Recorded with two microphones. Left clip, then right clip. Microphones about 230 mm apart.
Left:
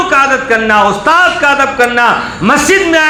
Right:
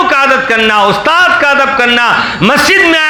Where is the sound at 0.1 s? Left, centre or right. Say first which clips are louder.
Right 1 dB; right.